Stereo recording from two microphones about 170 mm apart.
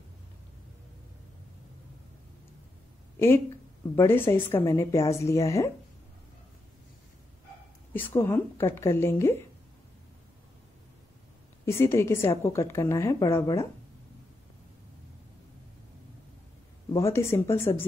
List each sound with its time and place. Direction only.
3.9 s a woman's voice: 15° left (ahead or behind)
7.9 s a woman's voice: 15° left (ahead or behind)
11.6 s a woman's voice: 15° left (ahead or behind)
16.9 s a woman's voice: 15° left (ahead or behind)